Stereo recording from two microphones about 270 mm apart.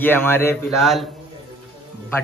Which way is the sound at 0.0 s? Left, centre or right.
Centre.